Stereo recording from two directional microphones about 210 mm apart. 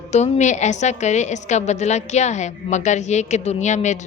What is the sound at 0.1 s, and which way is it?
A woman's voice, 35° left (ahead or behind).